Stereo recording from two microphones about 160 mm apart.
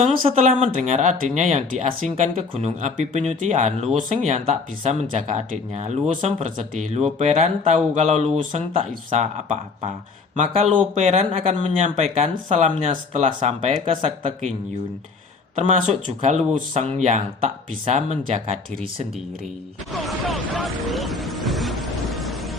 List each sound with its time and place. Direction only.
0.0 s speech: 40° right (ahead or behind)
15.5 s speech: 50° right (ahead or behind)
19.9 s vehicle: centre (ahead or behind)